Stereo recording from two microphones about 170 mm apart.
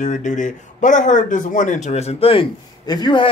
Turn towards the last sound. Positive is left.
turn(degrees=25)  # may be behind; listen again after turning